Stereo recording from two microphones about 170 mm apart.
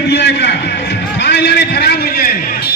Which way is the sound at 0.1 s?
85° left.